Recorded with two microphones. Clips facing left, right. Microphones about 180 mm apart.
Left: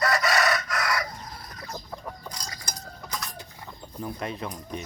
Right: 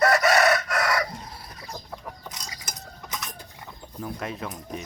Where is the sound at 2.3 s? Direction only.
20° right (ahead or behind).